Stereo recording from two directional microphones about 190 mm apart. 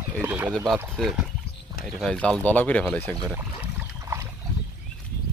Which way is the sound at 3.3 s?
15° right (ahead or behind).